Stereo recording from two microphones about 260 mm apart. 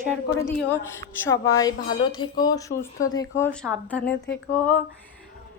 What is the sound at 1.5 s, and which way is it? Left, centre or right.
A woman's voice, centre.